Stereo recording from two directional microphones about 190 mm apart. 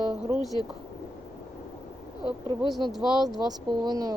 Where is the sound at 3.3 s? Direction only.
20° right (ahead or behind).